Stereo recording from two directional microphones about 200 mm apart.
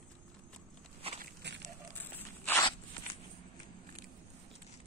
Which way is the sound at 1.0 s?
30° right (ahead or behind).